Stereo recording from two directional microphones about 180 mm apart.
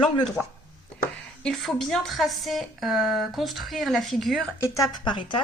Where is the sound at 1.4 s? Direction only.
Centre (ahead or behind).